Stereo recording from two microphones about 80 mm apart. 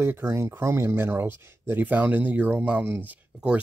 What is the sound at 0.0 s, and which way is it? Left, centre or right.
Speech, right.